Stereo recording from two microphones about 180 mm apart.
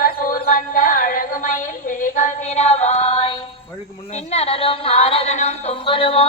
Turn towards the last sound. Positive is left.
turn(degrees=30)  # may be behind; listen again after turning